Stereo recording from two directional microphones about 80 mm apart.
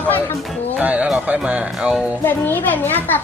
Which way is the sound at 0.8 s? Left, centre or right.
Centre.